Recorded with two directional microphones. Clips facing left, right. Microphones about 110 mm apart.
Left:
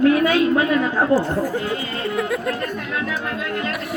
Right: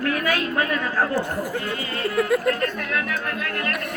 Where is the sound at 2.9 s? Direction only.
20° left (ahead or behind).